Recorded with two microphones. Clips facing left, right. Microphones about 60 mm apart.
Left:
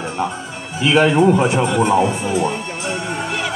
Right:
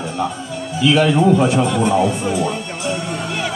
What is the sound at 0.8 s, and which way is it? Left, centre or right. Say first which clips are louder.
A man's voice: left 1 dB; left.